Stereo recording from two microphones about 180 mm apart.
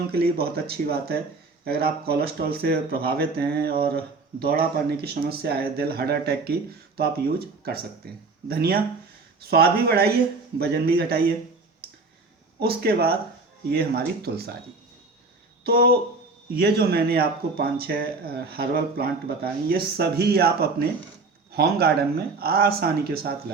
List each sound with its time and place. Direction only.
0.1 s speech: 60° right (ahead or behind)
12.5 s speech: 60° right (ahead or behind)
15.6 s speech: 60° right (ahead or behind)